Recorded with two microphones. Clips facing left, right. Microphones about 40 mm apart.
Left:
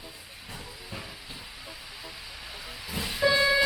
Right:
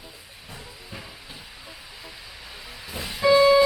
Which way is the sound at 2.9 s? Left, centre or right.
Right.